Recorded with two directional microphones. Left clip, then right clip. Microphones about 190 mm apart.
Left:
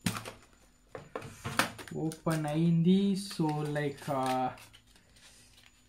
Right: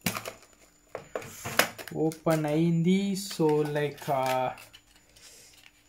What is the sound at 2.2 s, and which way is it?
Speech, 30° right (ahead or behind).